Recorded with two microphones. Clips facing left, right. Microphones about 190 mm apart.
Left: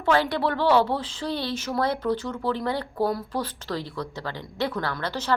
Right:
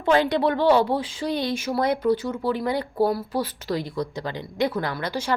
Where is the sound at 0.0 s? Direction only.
20° right (ahead or behind).